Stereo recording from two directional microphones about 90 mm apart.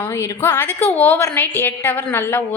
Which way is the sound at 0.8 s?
20° left (ahead or behind).